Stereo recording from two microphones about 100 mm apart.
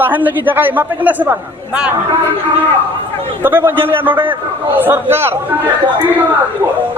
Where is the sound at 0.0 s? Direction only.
20° right (ahead or behind).